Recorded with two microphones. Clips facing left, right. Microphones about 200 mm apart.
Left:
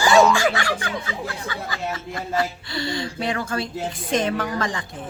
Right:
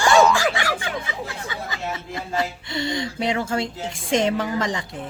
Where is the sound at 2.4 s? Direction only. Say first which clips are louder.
Even; 25° right (ahead or behind).